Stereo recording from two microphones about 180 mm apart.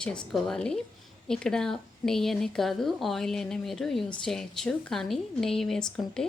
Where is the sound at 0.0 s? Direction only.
5° left (ahead or behind).